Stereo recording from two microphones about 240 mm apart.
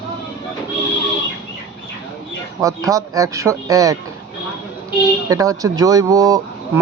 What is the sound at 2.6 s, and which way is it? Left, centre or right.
A man's voice, centre.